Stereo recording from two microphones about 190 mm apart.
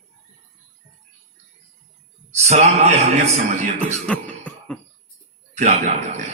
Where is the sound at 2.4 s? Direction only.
35° right (ahead or behind).